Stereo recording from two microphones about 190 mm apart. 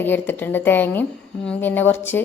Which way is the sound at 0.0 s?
10° left (ahead or behind).